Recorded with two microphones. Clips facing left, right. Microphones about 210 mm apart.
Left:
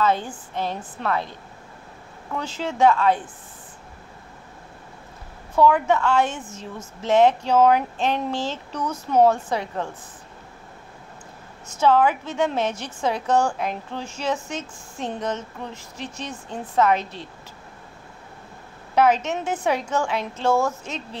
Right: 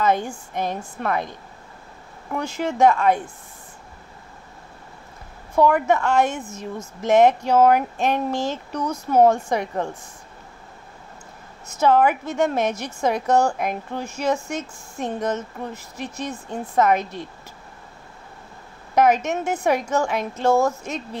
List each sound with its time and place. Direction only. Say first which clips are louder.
0.0 s a woman's voice: right 1 dB; 15° right (ahead or behind)
2.3 s a woman's voice: right 3 dB; 10° right (ahead or behind)
5.6 s a woman's voice: even; 10° right (ahead or behind)
11.8 s a woman's voice: right 1 dB; 10° right (ahead or behind)
18.9 s a woman's voice: right 1 dB; 10° right (ahead or behind)